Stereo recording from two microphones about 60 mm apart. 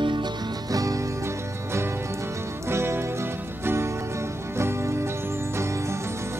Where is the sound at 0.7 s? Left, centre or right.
Right.